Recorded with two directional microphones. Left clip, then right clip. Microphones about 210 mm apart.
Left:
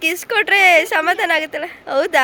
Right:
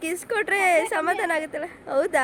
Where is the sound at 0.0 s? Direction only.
Centre (ahead or behind).